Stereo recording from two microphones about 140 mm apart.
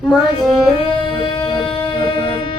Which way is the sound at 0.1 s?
Centre (ahead or behind).